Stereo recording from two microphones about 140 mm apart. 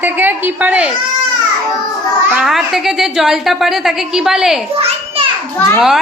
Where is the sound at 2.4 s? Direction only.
Centre (ahead or behind).